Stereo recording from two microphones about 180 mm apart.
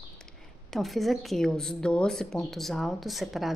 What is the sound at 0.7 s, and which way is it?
A woman's voice, centre (ahead or behind).